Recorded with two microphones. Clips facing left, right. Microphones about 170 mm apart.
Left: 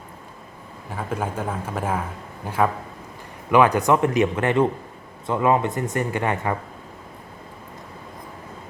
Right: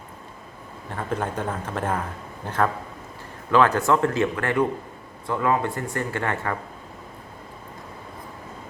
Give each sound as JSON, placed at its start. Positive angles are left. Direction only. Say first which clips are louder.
{"t": 0.9, "sound": "a man's voice", "louder": "even", "side_deg": 5}
{"t": 3.5, "sound": "a man's voice", "louder": "left 2 dB", "side_deg": 15}